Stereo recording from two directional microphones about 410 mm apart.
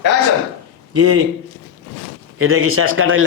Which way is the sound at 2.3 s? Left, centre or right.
Right.